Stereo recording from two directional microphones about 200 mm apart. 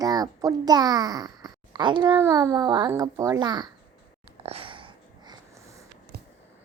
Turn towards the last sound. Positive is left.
turn(degrees=-25)  # may be behind; listen again after turning